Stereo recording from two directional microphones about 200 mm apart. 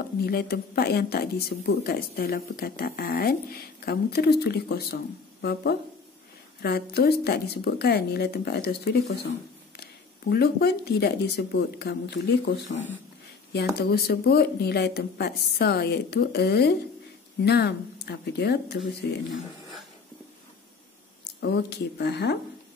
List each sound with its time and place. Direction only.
0.0 s speech: 50° left (ahead or behind)
10.3 s speech: 50° left (ahead or behind)
21.4 s speech: 55° left (ahead or behind)